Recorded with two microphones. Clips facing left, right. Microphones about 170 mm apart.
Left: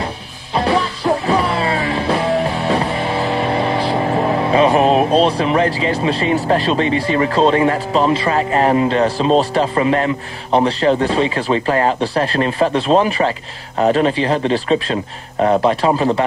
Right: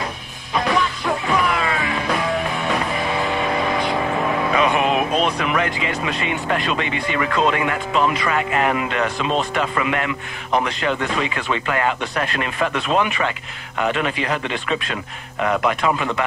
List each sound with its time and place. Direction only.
0.6 s music: 30° left (ahead or behind)
13.7 s a man's voice: 35° left (ahead or behind)